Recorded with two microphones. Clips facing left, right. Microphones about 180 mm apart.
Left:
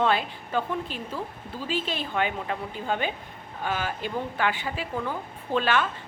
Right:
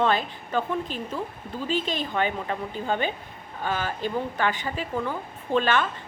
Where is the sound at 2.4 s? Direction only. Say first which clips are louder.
Right 2 dB; 5° left (ahead or behind).